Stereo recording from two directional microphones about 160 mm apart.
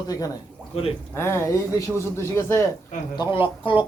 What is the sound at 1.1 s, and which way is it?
A man's voice, 15° left (ahead or behind).